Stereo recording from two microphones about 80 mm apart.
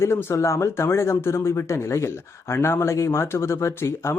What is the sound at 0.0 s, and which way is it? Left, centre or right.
Speech, left.